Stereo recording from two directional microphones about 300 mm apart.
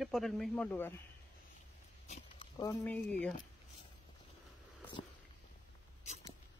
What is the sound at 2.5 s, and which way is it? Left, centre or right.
Speech, centre.